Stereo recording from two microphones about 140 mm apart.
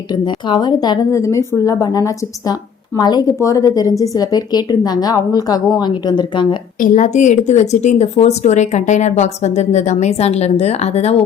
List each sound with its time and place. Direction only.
0.1 s a woman's voice: 35° left (ahead or behind)
6.7 s speech: 70° left (ahead or behind); by 11.2 s 50° left (ahead or behind)